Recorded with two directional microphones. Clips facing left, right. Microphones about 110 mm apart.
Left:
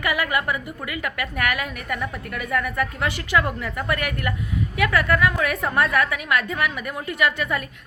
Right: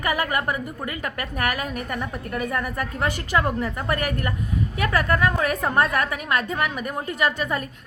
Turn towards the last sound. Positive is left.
turn(degrees=-30)  # may be behind; listen again after turning